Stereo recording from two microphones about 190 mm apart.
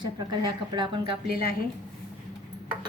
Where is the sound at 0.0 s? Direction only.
25° right (ahead or behind).